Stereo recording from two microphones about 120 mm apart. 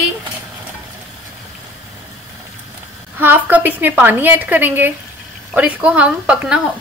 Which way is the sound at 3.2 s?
15° right (ahead or behind).